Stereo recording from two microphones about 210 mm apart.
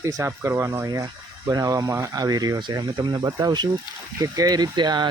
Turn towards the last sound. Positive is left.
turn(degrees=-20)  # may be behind; listen again after turning